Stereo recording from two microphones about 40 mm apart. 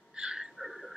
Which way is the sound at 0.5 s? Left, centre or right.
Centre.